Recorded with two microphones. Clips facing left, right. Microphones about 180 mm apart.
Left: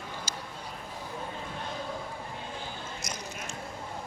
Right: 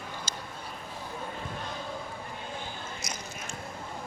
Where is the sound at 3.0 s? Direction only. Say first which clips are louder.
Left 2 dB; 45° left (ahead or behind).